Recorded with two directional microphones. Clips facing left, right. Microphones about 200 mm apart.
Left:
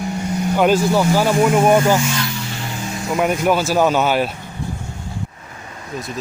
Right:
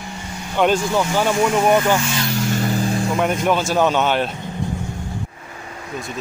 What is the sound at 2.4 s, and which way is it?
Vehicle, 45° right (ahead or behind).